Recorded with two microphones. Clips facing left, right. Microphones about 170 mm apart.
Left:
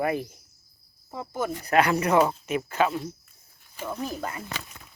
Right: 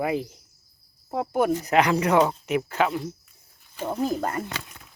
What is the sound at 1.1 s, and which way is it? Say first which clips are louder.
Speech: right 7 dB; 65° right (ahead or behind).